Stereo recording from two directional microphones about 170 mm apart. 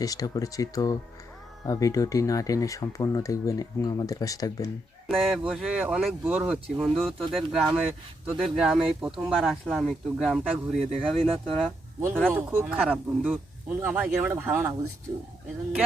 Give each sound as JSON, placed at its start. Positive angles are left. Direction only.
{"t": 0.0, "sound": "speech", "side_deg": 20}
{"t": 5.0, "sound": "speech", "side_deg": 0}
{"t": 11.2, "sound": "speech", "side_deg": -35}
{"t": 12.3, "sound": "speech", "side_deg": -10}